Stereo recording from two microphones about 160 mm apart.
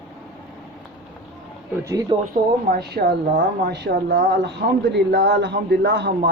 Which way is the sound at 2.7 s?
90° right.